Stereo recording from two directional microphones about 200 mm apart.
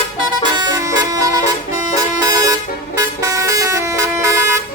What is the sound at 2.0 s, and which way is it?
Vehicle, 15° right (ahead or behind).